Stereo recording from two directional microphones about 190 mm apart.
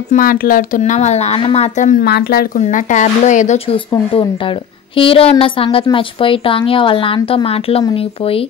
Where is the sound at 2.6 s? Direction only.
40° left (ahead or behind).